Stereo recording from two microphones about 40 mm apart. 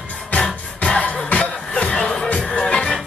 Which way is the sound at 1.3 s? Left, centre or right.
Left.